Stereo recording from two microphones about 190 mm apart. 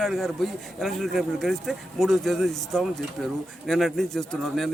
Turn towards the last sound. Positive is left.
turn(degrees=0)  # may be behind; listen again after turning